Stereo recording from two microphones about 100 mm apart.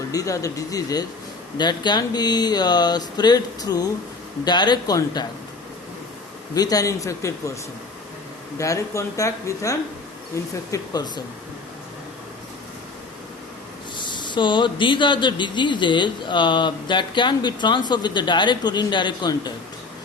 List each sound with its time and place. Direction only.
0.1 s a man's voice: 35° left (ahead or behind)
6.5 s speech: 40° left (ahead or behind)
8.5 s speech: 30° left (ahead or behind)
10.7 s a man's voice: 45° left (ahead or behind)
13.9 s a man's voice: 50° left (ahead or behind)